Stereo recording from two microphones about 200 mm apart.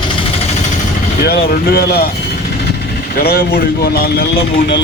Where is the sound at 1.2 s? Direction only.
50° left (ahead or behind).